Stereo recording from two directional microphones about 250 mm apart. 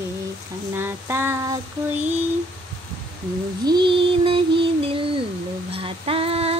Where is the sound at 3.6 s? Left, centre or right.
Centre.